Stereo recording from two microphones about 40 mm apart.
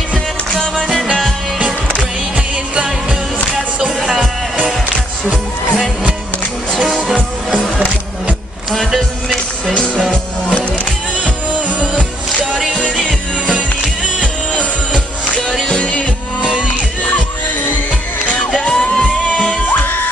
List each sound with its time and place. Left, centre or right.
3.8 s music: centre
6.8 s music: right
8.9 s music: centre
14.2 s music: left
15.7 s music: left
18.6 s music: left